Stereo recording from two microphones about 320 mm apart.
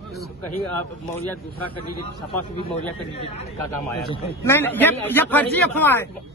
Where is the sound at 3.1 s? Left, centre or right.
Centre.